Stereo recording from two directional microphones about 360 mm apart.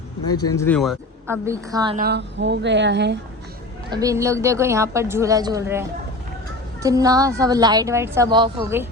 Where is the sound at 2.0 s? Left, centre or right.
Right.